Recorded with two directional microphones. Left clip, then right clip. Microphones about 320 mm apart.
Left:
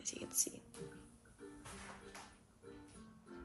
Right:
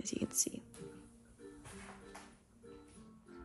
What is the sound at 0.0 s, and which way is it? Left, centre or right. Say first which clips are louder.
Whispering: right 4 dB; centre.